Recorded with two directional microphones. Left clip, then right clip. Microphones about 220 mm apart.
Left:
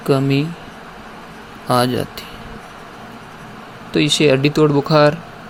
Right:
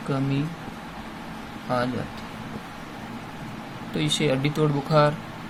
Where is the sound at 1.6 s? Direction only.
40° left (ahead or behind).